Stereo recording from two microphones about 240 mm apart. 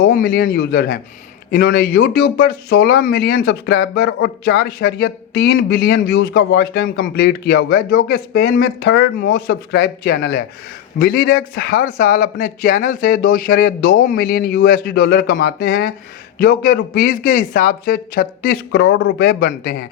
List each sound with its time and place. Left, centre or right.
0.0 s speech: left
18.9 s a man's voice: left
19.2 s speech: left